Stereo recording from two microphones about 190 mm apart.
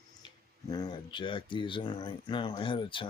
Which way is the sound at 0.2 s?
20° left (ahead or behind).